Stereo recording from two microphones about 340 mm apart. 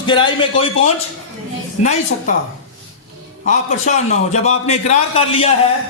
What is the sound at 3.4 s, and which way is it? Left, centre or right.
A man's voice, left.